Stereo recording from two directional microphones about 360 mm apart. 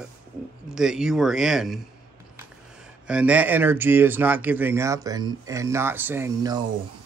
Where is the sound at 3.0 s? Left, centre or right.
Centre.